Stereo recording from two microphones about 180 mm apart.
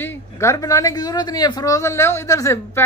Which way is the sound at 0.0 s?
15° left (ahead or behind).